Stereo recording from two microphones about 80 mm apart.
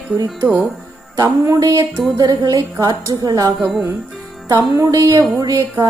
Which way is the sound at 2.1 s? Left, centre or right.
Right.